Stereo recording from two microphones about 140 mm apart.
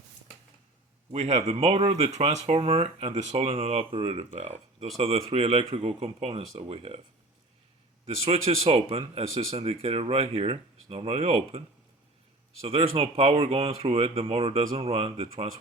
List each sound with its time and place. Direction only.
1.1 s speech: 55° right (ahead or behind)
8.0 s speech: 45° right (ahead or behind)
12.6 s speech: 45° right (ahead or behind)